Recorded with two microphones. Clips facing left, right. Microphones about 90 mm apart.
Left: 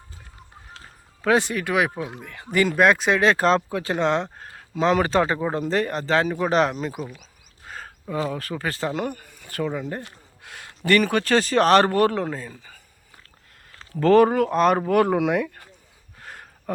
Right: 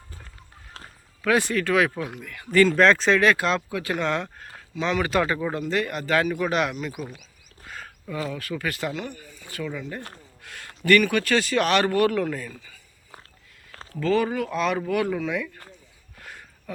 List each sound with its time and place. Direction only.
1.2 s speech: 25° left (ahead or behind)
3.3 s speech: 35° left (ahead or behind); by 9.6 s 50° left (ahead or behind)
9.6 s speech: 40° left (ahead or behind)
10.4 s speech: 20° left (ahead or behind)
14.0 s speech: 55° left (ahead or behind)
15.2 s speech: 60° left (ahead or behind)
16.1 s a sound: 35° left (ahead or behind)
16.7 s speech: 45° left (ahead or behind)